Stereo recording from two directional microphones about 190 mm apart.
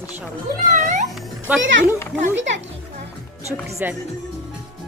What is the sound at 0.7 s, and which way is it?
Music, 40° right (ahead or behind).